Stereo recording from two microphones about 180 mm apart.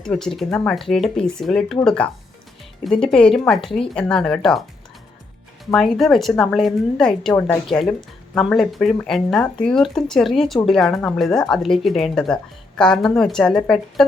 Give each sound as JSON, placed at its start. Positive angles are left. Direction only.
{"t": 0.0, "sound": "speech", "side_deg": 0}
{"t": 5.7, "sound": "speech", "side_deg": 0}